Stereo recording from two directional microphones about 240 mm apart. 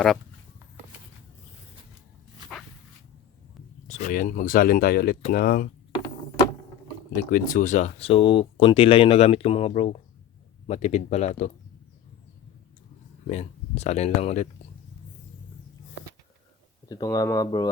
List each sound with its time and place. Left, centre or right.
3.8 s speech: left
7.2 s speech: left
13.2 s speech: left
16.9 s speech: centre